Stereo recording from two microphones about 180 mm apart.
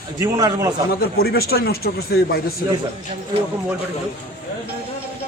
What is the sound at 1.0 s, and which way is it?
A man's voice, 60° left (ahead or behind).